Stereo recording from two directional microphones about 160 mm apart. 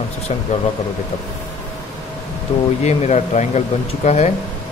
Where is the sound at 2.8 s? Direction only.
45° left (ahead or behind).